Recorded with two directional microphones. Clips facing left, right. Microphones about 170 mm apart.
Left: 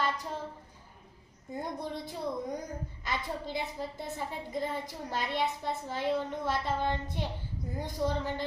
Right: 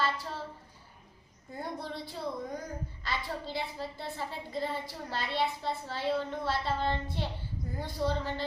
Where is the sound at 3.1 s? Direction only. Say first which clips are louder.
Left 1 dB; 20° left (ahead or behind).